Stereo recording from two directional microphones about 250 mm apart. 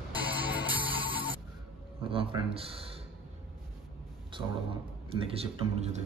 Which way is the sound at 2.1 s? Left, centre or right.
Right.